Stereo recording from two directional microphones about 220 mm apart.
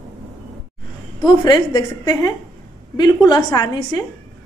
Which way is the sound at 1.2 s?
20° left (ahead or behind).